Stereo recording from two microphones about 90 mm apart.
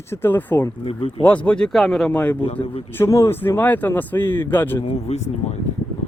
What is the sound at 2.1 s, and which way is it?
Speech, 20° left (ahead or behind).